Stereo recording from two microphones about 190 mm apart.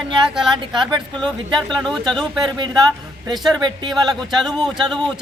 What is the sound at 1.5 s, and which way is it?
A woman's voice, centre (ahead or behind).